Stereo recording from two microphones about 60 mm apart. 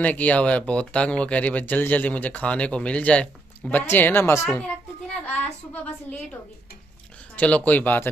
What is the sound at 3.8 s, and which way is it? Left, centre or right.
Speech, left.